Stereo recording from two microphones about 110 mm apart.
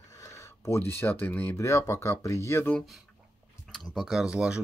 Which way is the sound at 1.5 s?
25° left (ahead or behind).